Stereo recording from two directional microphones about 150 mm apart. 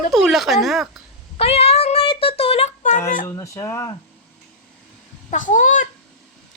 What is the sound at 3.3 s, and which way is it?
Speech, 20° left (ahead or behind).